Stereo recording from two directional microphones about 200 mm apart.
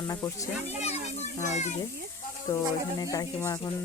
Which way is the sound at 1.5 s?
35° left (ahead or behind).